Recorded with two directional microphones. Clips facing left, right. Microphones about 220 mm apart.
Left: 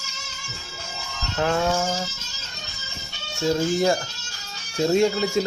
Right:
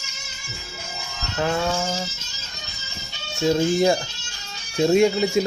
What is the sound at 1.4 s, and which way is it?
Music, 5° left (ahead or behind).